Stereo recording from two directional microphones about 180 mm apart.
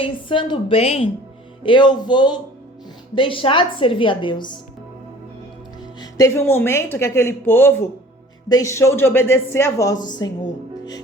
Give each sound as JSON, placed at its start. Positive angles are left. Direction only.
{"t": 0.0, "sound": "a woman's voice", "side_deg": 30}
{"t": 6.0, "sound": "speech", "side_deg": 15}